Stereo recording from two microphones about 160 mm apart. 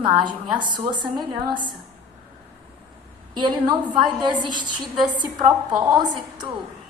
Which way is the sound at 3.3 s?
30° right (ahead or behind).